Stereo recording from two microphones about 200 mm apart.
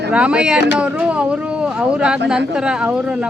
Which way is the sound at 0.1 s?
5° right (ahead or behind).